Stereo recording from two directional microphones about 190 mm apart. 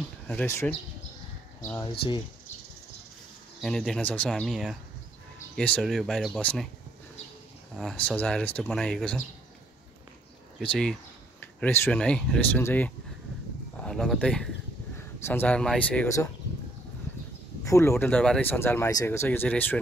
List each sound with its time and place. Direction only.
0.3 s speech: 10° left (ahead or behind)
1.9 s speech: 25° left (ahead or behind)
3.6 s speech: 5° left (ahead or behind)
7.7 s speech: 5° left (ahead or behind)
10.6 s speech: 5° left (ahead or behind)
17.6 s speech: 15° left (ahead or behind)